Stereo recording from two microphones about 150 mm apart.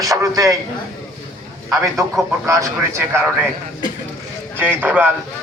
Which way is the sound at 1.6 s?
20° right (ahead or behind).